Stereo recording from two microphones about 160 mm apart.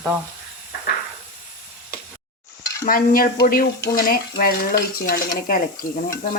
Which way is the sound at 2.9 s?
65° left (ahead or behind).